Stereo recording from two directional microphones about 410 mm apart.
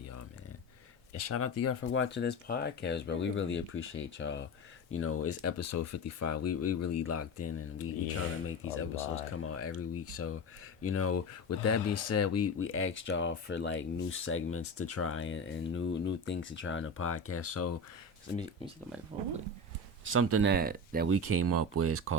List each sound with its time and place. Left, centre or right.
1.1 s speech: left
20.1 s speech: right
21.2 s speech: right